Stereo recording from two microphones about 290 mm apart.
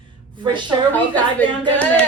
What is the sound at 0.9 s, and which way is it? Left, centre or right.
A woman's voice, centre.